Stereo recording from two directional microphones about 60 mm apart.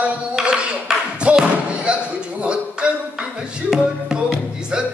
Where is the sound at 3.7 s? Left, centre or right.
Centre.